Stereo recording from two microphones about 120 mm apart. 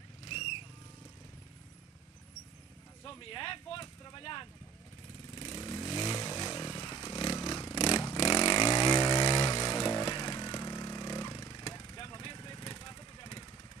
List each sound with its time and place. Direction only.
0.3 s vehicle: 50° left (ahead or behind)
3.0 s speech: 40° left (ahead or behind)
5.3 s vehicle: 40° left (ahead or behind)
9.5 s a sound: 45° left (ahead or behind)
11.6 s vehicle: 35° left (ahead or behind)